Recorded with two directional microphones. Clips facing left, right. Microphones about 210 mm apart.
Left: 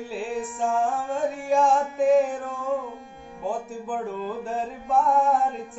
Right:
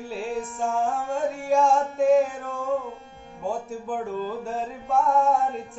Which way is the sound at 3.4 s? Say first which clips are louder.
Even; centre (ahead or behind).